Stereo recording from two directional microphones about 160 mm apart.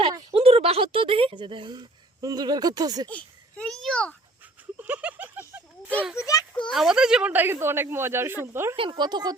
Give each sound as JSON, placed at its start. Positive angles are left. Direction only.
{"t": 0.3, "sound": "speech", "side_deg": -40}
{"t": 3.1, "sound": "a child's voice", "side_deg": 10}
{"t": 4.8, "sound": "a sound", "side_deg": -10}
{"t": 6.1, "sound": "a child's voice", "side_deg": 20}
{"t": 6.7, "sound": "speech", "side_deg": 0}
{"t": 8.7, "sound": "speech", "side_deg": -30}